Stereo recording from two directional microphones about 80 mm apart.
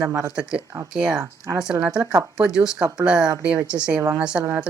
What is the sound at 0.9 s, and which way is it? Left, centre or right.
Speech, centre.